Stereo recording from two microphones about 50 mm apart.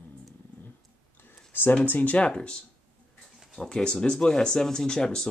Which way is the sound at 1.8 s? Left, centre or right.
Left.